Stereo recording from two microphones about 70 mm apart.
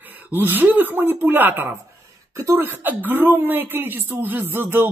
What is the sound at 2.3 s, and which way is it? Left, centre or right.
Speech, right.